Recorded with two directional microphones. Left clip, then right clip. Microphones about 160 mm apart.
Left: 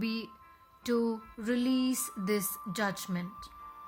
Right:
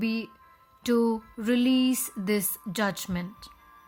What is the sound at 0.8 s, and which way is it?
Music, 45° right (ahead or behind).